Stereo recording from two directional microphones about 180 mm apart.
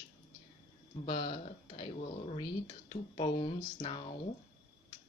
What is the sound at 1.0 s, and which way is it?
Speech, 25° left (ahead or behind).